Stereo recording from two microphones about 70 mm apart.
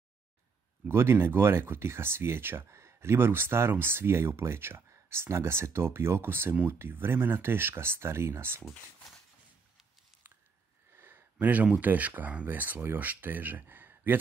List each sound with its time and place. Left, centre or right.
0.8 s speech: right
11.0 s speech: right